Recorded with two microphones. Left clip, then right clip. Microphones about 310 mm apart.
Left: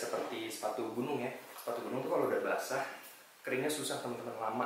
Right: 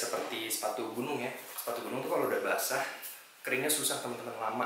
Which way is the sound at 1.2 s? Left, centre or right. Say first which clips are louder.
Right 2 dB; centre.